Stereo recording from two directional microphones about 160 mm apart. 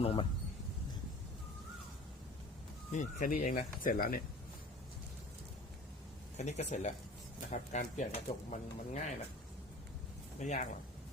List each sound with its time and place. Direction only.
0.0 s speech: 35° left (ahead or behind)
2.9 s speech: 50° left (ahead or behind)
6.3 s speech: 45° left (ahead or behind)
10.4 s speech: 50° left (ahead or behind)